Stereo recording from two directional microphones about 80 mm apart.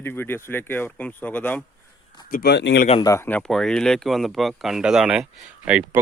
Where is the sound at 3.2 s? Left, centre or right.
Left.